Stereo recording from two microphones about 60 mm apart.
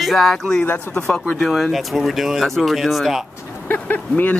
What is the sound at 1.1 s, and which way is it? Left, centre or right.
Speech, centre.